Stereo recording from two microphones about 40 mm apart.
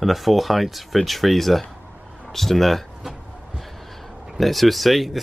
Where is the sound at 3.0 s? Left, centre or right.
Centre.